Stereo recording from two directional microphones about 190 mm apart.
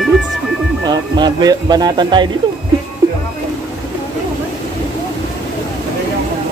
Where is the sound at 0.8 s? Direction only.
20° right (ahead or behind).